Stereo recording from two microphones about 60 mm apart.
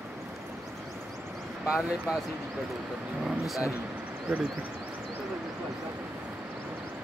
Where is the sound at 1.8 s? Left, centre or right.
Centre.